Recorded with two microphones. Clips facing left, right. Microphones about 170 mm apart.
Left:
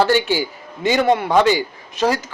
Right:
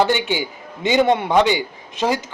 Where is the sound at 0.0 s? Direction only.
15° right (ahead or behind).